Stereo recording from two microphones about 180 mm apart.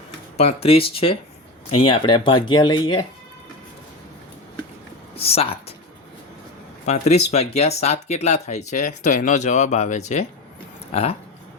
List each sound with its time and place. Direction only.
0.3 s speech: 35° left (ahead or behind)
5.1 s speech: 35° left (ahead or behind)
6.8 s speech: 40° left (ahead or behind)